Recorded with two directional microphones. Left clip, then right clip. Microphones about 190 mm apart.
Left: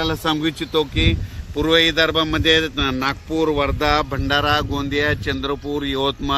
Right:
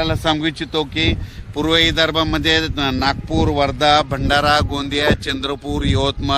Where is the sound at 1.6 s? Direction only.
70° right (ahead or behind).